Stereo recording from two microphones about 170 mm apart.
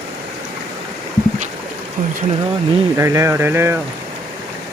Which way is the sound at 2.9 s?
15° right (ahead or behind).